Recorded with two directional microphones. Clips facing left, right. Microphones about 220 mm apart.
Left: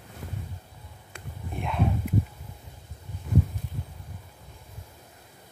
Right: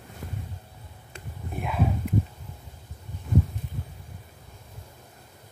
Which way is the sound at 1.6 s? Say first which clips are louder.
Right 1 dB; 5° right (ahead or behind).